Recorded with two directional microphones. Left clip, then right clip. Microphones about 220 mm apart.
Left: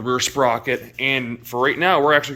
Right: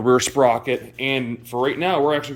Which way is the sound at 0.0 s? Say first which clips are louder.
Right 3 dB; 20° right (ahead or behind).